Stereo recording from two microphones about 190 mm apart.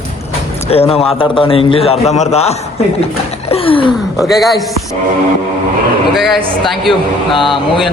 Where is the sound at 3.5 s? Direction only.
30° left (ahead or behind).